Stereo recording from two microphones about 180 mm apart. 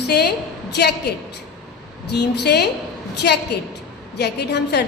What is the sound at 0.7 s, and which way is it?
A woman's voice, 65° left (ahead or behind).